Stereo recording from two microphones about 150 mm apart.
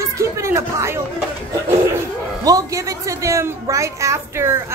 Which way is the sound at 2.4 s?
25° right (ahead or behind).